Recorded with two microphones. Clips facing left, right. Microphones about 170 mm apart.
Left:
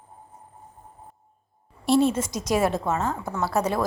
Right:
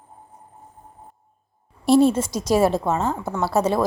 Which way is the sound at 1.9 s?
35° right (ahead or behind).